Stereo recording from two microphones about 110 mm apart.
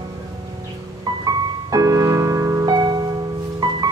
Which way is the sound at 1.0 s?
35° right (ahead or behind).